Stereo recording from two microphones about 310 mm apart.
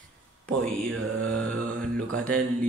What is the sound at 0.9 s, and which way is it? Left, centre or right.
Mantra, right.